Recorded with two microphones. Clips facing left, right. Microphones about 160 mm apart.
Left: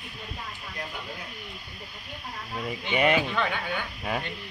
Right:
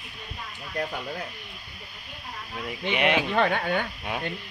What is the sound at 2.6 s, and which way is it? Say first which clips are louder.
Speech: left 1 dB; 5° left (ahead or behind).